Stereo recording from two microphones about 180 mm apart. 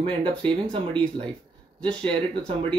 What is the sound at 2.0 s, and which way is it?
Speech, 30° right (ahead or behind).